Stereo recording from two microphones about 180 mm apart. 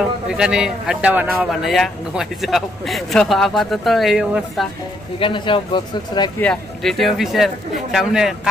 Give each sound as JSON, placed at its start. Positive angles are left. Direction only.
{"t": 0.0, "sound": "speech", "side_deg": -5}
{"t": 5.2, "sound": "speech", "side_deg": 25}
{"t": 6.4, "sound": "speech", "side_deg": 5}